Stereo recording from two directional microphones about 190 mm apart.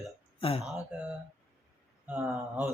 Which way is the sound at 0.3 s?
30° left (ahead or behind).